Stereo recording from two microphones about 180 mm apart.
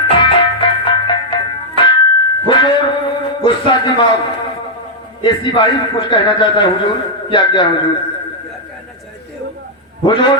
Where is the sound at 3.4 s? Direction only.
25° left (ahead or behind).